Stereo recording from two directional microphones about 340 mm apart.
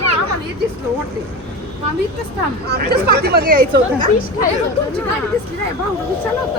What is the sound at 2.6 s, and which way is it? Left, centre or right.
Speech, right.